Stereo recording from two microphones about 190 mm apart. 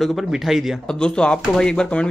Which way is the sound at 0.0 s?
Centre (ahead or behind).